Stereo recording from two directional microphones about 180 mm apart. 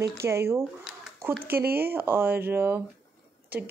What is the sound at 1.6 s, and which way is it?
Speech, 60° right (ahead or behind).